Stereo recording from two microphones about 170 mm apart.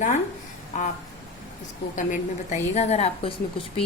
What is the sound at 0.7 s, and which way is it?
Speech, 45° left (ahead or behind).